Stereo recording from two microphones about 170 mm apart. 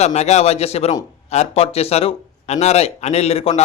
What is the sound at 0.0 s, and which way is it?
A man's voice, 40° left (ahead or behind).